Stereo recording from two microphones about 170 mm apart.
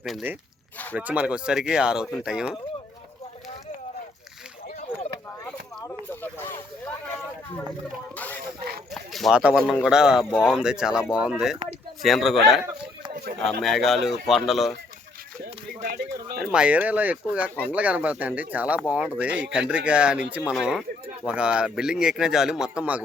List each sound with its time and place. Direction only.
0.0 s a man's voice: centre (ahead or behind)
8.1 s a sound: 10° left (ahead or behind)
8.9 s a man's voice: centre (ahead or behind)
13.6 s a man's voice: centre (ahead or behind)
15.9 s a sound: 90° right
16.5 s a man's voice: 5° right (ahead or behind)